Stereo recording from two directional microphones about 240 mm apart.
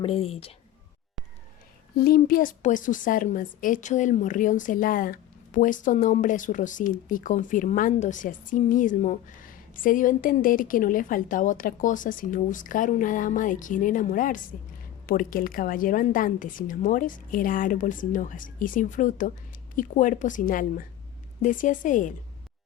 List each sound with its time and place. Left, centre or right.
0.0 s speech: left
2.0 s a woman's voice: left